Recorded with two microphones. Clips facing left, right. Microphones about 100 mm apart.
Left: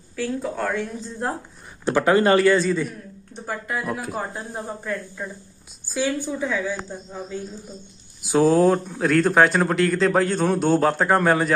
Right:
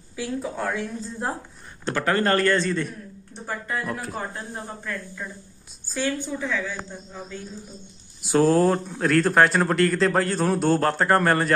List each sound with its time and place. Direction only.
0.1 s speech: 5° right (ahead or behind)
1.9 s a woman's voice: 15° left (ahead or behind)
4.6 s a woman's voice: 15° left (ahead or behind)
8.2 s speech: centre (ahead or behind)